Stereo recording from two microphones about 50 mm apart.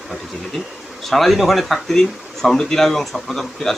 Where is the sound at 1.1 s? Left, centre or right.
Centre.